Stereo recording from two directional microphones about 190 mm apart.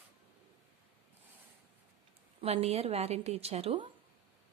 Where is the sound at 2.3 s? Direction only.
30° right (ahead or behind).